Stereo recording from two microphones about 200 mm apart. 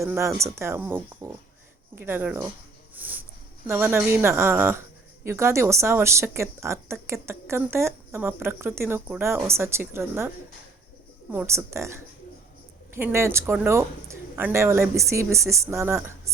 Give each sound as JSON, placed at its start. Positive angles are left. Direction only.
{"t": 0.0, "sound": "a woman's voice", "side_deg": -15}
{"t": 2.9, "sound": "a sound", "side_deg": -10}
{"t": 3.7, "sound": "a woman's voice", "side_deg": -10}